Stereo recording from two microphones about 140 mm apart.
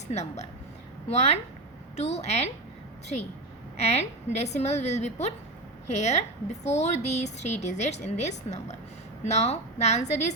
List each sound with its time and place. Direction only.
0.1 s a woman's voice: 55° left (ahead or behind)
3.8 s a woman's voice: 50° left (ahead or behind)